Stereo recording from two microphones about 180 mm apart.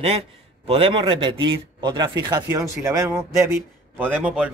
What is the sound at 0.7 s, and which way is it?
A man's voice, 30° right (ahead or behind).